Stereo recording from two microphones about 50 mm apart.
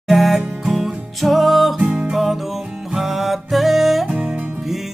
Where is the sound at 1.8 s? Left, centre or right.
Centre.